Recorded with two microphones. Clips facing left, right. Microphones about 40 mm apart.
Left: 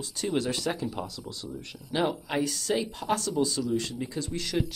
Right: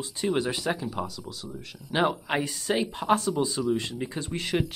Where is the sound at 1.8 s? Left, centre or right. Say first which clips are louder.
Right 3 dB; right.